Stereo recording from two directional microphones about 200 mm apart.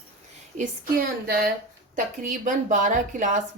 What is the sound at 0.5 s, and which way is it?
Speech, 35° right (ahead or behind).